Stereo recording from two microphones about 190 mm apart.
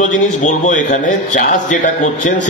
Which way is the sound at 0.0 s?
40° left (ahead or behind).